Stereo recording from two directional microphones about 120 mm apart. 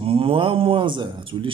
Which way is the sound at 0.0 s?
50° right (ahead or behind).